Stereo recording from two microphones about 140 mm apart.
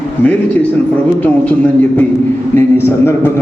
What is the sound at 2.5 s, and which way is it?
Speech, 15° left (ahead or behind).